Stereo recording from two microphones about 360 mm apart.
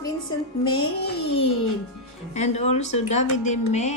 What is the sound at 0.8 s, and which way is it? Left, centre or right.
Speech, left.